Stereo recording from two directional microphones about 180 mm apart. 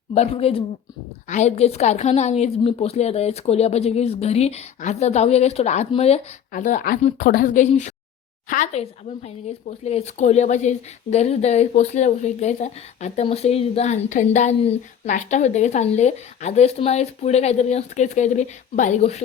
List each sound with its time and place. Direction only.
0.1 s a woman's voice: 35° left (ahead or behind)